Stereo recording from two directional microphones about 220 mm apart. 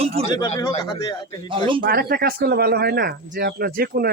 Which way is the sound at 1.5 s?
25° right (ahead or behind).